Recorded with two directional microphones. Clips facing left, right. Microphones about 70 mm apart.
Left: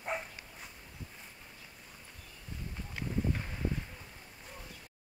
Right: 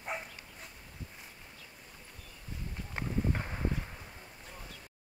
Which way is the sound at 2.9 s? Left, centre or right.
Right.